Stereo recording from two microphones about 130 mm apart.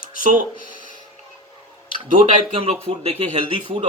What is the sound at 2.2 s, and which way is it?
Speech, 50° right (ahead or behind).